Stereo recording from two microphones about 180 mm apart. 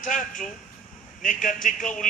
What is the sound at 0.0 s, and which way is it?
Speech, 45° left (ahead or behind).